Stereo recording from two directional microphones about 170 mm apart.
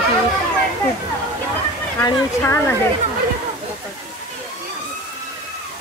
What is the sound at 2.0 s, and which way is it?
Speech, 15° left (ahead or behind).